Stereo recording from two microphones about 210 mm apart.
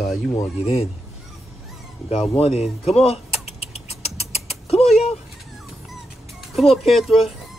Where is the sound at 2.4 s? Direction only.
30° left (ahead or behind).